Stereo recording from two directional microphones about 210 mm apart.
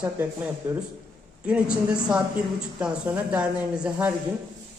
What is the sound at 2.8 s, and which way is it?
Speech, 5° right (ahead or behind).